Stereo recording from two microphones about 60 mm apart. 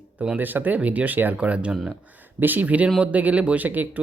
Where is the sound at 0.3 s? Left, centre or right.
Right.